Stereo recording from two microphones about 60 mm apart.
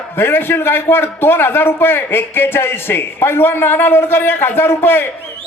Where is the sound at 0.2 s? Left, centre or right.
Left.